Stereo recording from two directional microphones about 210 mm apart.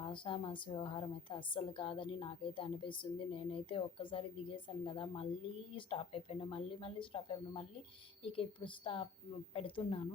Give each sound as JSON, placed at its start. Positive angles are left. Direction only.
{"t": 0.1, "sound": "a woman's voice", "side_deg": 25}